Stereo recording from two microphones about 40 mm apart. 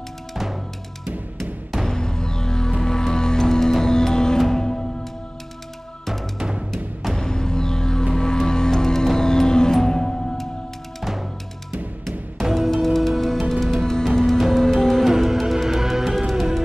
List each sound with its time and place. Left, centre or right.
0.3 s music: centre
1.9 s music: centre
7.1 s music: centre
11.0 s music: centre
12.5 s music: centre
14.1 s music: centre
15.0 s music: centre